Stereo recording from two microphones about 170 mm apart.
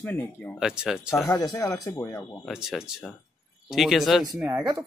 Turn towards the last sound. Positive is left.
turn(degrees=-10)  # may be behind; listen again after turning